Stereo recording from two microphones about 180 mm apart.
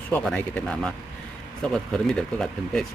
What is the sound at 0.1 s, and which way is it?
Speech, 5° left (ahead or behind).